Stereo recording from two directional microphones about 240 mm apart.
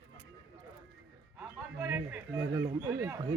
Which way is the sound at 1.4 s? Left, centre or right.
Centre.